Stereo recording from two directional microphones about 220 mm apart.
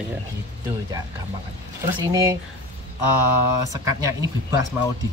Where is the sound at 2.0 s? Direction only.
15° right (ahead or behind).